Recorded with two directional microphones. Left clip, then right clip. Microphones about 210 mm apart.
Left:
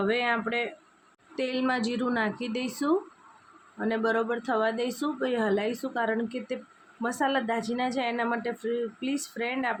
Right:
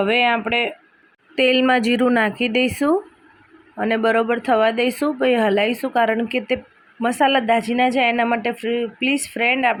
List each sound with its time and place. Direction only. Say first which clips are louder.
0.0 s speech: right 9 dB; 20° right (ahead or behind)